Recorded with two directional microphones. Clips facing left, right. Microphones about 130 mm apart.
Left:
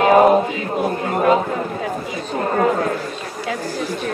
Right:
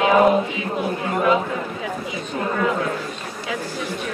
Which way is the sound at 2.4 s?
45° left (ahead or behind).